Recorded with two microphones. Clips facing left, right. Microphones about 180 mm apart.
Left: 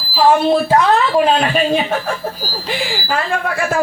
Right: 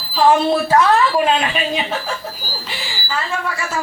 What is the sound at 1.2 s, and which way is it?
Speech, 40° left (ahead or behind).